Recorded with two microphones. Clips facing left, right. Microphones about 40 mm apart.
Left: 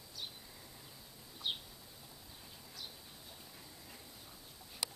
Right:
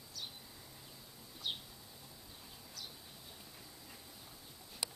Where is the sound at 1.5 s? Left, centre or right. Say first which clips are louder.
Left 2 dB; centre.